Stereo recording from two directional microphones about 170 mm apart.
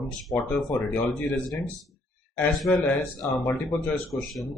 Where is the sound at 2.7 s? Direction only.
10° left (ahead or behind).